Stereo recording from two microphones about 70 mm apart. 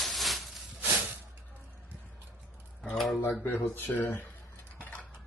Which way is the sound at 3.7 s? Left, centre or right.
Left.